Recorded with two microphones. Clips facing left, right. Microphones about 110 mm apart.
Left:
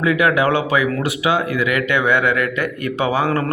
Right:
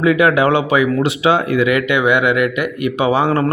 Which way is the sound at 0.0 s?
25° right (ahead or behind).